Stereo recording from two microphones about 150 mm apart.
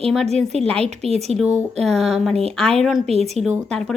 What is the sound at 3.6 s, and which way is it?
Speech, 5° left (ahead or behind).